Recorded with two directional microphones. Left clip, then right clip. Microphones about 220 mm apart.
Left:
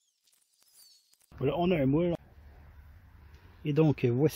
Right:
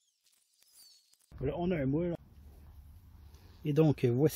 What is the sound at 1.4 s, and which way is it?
Speech, 30° left (ahead or behind).